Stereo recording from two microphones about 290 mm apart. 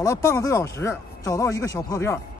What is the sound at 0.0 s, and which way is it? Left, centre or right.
Speech, centre.